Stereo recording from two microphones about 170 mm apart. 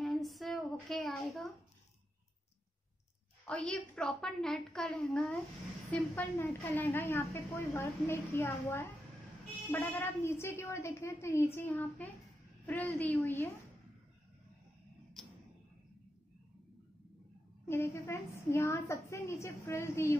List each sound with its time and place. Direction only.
0.0 s a sound: centre (ahead or behind)
3.4 s a woman's voice: 5° left (ahead or behind)
17.6 s a woman's voice: 15° left (ahead or behind)